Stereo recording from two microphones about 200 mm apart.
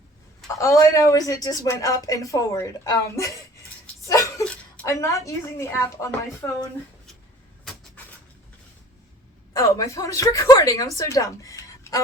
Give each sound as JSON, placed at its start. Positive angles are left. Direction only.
{"t": 0.4, "sound": "a woman's voice", "side_deg": 15}
{"t": 4.0, "sound": "a sound", "side_deg": 15}
{"t": 4.4, "sound": "a woman's voice", "side_deg": 10}
{"t": 9.5, "sound": "a woman's voice", "side_deg": 20}